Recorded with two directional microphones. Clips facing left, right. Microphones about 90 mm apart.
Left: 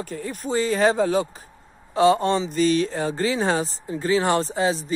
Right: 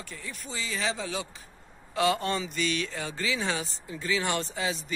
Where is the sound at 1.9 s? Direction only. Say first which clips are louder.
Left 9 dB; 30° left (ahead or behind).